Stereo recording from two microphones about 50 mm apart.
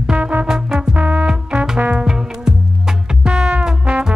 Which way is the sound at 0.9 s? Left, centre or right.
Right.